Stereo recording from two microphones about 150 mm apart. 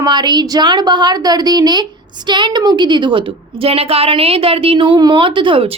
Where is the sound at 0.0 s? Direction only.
30° right (ahead or behind).